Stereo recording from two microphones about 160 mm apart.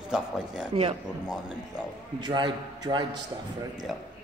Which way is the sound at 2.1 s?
25° right (ahead or behind).